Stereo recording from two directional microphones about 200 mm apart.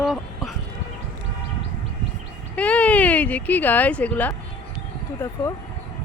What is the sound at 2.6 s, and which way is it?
Speech, 5° left (ahead or behind).